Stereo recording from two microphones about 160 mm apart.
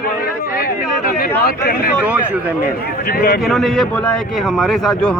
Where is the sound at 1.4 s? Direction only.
70° left (ahead or behind).